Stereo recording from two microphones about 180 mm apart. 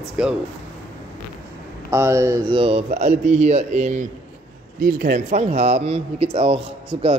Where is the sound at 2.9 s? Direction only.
40° right (ahead or behind).